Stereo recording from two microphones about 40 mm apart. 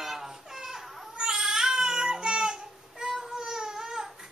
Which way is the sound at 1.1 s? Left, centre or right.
Right.